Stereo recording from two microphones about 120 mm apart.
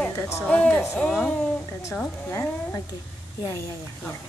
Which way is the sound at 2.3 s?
20° left (ahead or behind).